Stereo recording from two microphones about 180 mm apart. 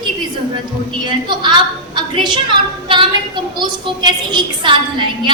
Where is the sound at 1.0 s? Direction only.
25° right (ahead or behind).